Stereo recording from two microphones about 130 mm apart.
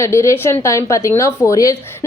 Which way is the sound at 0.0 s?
20° left (ahead or behind).